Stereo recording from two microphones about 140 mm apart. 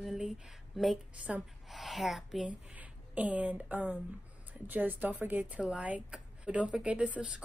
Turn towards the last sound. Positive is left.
turn(degrees=-10)  # may be behind; listen again after turning